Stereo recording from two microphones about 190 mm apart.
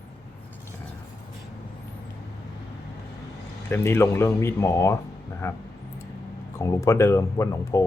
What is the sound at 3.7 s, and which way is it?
Speech, 10° left (ahead or behind).